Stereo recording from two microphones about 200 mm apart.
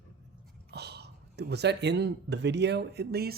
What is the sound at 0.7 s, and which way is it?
Speech, 55° right (ahead or behind).